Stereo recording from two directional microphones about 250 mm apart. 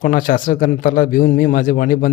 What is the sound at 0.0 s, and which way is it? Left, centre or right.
Speech, left.